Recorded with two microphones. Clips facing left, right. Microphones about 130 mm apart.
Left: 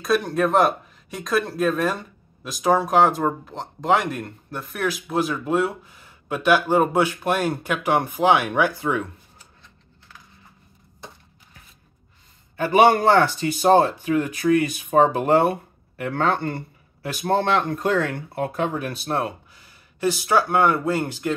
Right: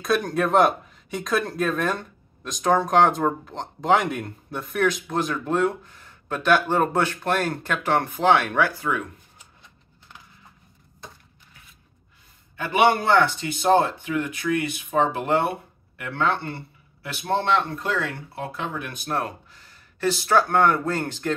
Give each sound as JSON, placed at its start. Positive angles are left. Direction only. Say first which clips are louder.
{"t": 0.0, "sound": "speech", "louder": "left 2 dB", "side_deg": 0}
{"t": 12.5, "sound": "speech", "louder": "left 4 dB", "side_deg": 40}
{"t": 19.0, "sound": "speech", "louder": "left 2 dB", "side_deg": 25}
{"t": 19.5, "sound": "speech", "louder": "even", "side_deg": 10}